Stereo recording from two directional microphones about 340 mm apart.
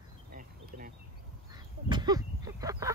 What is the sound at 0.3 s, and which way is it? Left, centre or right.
Insect, right.